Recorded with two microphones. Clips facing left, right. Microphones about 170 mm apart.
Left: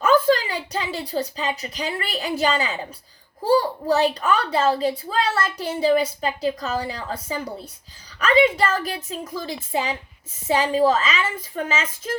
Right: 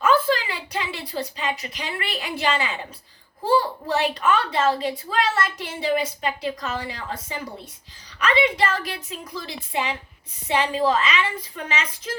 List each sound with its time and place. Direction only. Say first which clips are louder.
0.0 s a woman's voice: left 3 dB; 40° left (ahead or behind)